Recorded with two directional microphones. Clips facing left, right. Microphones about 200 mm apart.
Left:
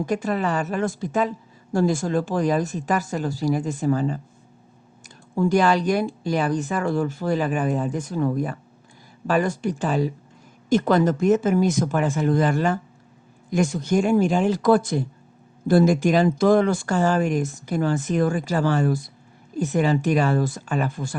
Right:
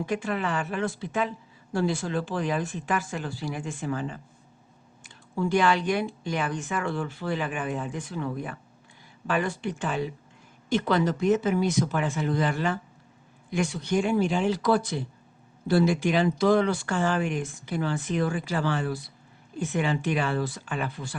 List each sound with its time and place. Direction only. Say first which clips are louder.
0.0 s speech: left 5 dB; 40° left (ahead or behind)